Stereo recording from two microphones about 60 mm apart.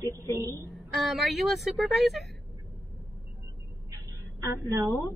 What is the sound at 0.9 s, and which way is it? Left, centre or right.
A woman's voice, centre.